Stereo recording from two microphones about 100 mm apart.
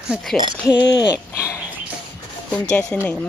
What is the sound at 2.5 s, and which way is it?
Speech, 10° left (ahead or behind).